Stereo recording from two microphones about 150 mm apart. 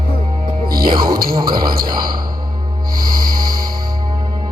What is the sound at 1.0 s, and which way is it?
Music, 75° right (ahead or behind).